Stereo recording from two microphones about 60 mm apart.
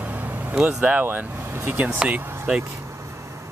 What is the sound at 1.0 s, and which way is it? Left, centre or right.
Speech, right.